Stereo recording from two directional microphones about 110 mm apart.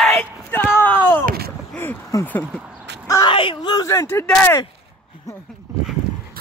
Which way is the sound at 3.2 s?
50° left (ahead or behind).